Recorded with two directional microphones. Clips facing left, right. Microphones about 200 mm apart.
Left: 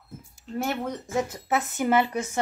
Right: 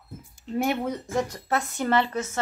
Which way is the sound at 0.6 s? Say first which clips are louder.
Right 3 dB; 15° right (ahead or behind).